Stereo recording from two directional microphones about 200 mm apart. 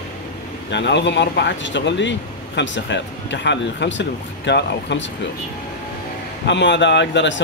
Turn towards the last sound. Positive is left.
turn(degrees=65)  # may be behind; listen again after turning